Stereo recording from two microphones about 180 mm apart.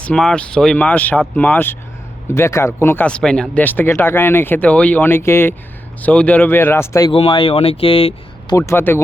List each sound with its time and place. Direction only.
0.0 s speech: 5° left (ahead or behind)
7.1 s speech: 30° left (ahead or behind)
8.5 s speech: 15° left (ahead or behind)